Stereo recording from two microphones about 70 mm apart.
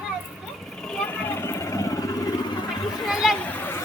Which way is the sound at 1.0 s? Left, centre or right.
Left.